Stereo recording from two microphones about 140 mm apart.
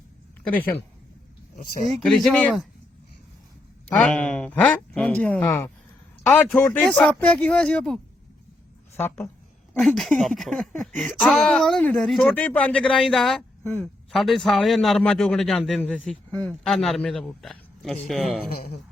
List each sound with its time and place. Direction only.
0.5 s speech: 10° left (ahead or behind)
1.9 s speech: centre (ahead or behind)
3.8 s speech: 10° left (ahead or behind)
9.0 s speech: 15° left (ahead or behind)
9.7 s speech: centre (ahead or behind)
18.4 s speech: 90° left